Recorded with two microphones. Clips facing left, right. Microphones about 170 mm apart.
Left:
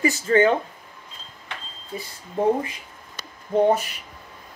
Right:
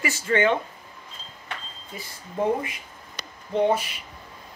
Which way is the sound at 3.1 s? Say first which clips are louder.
Left 4 dB; 45° left (ahead or behind).